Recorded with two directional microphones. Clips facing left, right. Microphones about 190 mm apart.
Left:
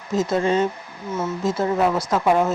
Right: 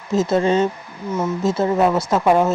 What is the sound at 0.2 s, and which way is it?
Speech, 30° right (ahead or behind).